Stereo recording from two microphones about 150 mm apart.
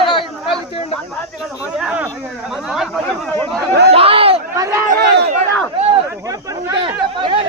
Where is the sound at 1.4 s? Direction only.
5° right (ahead or behind).